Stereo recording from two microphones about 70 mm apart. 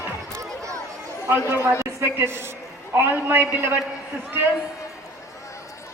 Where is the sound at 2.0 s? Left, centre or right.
Right.